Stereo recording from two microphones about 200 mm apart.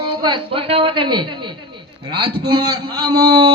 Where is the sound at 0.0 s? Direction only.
20° right (ahead or behind).